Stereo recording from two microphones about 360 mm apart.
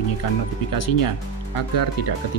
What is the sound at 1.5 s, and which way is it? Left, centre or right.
Speech, left.